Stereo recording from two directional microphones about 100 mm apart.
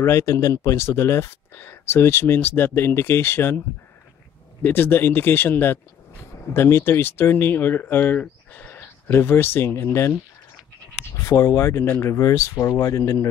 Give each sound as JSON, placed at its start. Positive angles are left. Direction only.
{"t": 0.0, "sound": "speech", "side_deg": 30}
{"t": 11.2, "sound": "speech", "side_deg": 30}